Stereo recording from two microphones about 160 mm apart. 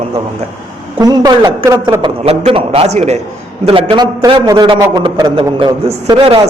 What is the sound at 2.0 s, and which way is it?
A man's voice, 40° right (ahead or behind).